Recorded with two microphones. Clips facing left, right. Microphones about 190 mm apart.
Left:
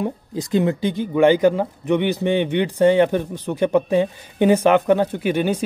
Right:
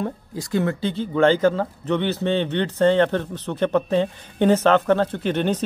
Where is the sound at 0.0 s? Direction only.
20° left (ahead or behind).